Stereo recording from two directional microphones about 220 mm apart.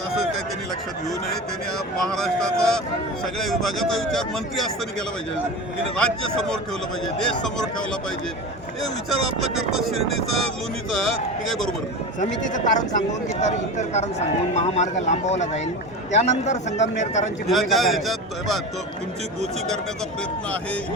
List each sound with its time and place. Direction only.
2.0 s speech: centre (ahead or behind)
6.0 s speech: 5° left (ahead or behind)
11.0 s speech: centre (ahead or behind)
12.5 s speech: 35° left (ahead or behind)
17.5 s speech: centre (ahead or behind)